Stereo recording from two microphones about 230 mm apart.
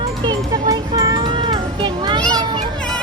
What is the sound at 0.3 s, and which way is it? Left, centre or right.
Music, centre.